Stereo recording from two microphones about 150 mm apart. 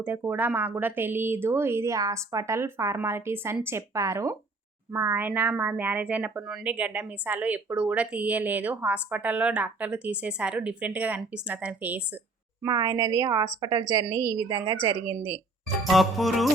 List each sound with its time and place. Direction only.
0.0 s a woman's voice: 10° right (ahead or behind)
12.6 s a woman's voice: 25° right (ahead or behind)
15.8 s music: centre (ahead or behind)